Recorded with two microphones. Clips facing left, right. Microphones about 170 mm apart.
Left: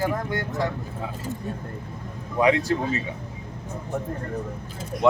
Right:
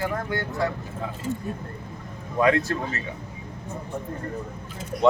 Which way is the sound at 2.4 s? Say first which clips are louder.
Left 1 dB; 15° left (ahead or behind).